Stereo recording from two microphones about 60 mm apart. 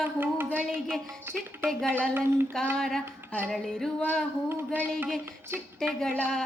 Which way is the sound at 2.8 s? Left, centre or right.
Centre.